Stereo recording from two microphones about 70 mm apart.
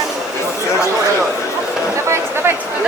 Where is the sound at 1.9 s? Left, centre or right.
Right.